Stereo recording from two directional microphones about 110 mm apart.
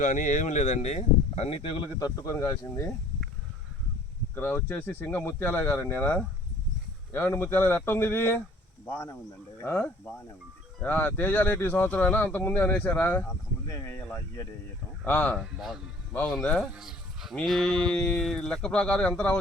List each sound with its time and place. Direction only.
0.3 s speech: 90° left; by 1.9 s 60° left (ahead or behind)
2.0 s speech: 35° left (ahead or behind)
4.4 s speech: 20° left (ahead or behind)
13.7 s speech: 25° left (ahead or behind)
15.0 s speech: 15° left (ahead or behind)
15.4 s a sound: 5° right (ahead or behind)
16.2 s speech: 5° left (ahead or behind)
16.7 s a sound: 5° right (ahead or behind)
17.9 s speech: 10° left (ahead or behind)